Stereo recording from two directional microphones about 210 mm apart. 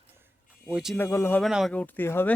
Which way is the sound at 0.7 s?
5° right (ahead or behind).